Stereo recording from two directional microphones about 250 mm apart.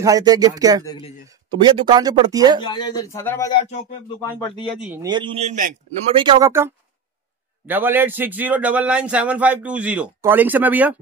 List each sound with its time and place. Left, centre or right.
0.0 s a man's voice: centre
0.8 s speech: centre
1.3 s a man's voice: centre
2.6 s speech: centre
4.7 s a man's voice: centre
5.0 s a man's voice: centre
6.1 s a man's voice: centre